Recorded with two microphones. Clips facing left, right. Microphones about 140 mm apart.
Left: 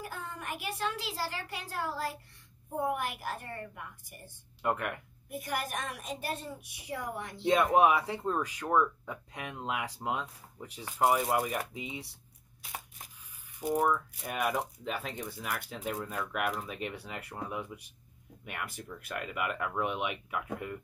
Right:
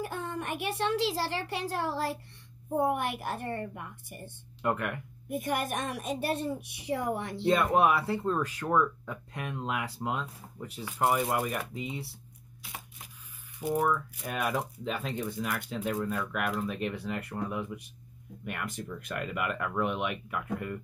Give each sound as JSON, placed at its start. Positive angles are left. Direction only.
{"t": 0.4, "sound": "a child's voice", "side_deg": -25}
{"t": 4.6, "sound": "speech", "side_deg": 10}
{"t": 5.5, "sound": "a child's voice", "side_deg": -25}
{"t": 7.4, "sound": "speech", "side_deg": 15}
{"t": 13.7, "sound": "speech", "side_deg": 5}